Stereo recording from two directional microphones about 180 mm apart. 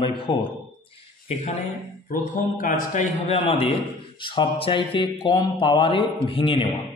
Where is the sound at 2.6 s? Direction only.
45° left (ahead or behind).